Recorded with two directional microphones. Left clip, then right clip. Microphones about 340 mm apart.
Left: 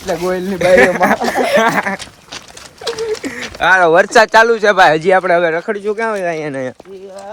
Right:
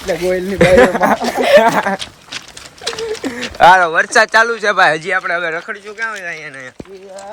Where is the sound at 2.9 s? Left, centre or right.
Centre.